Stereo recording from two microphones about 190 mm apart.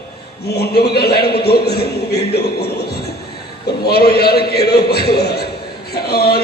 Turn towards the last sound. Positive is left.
turn(degrees=55)  # may be behind; listen again after turning